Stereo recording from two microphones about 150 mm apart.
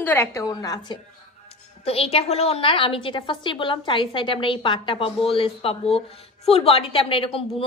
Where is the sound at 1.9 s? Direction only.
40° left (ahead or behind).